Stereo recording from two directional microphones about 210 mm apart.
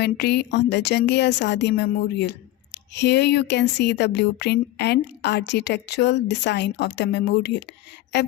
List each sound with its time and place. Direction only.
0.0 s speech: 50° left (ahead or behind)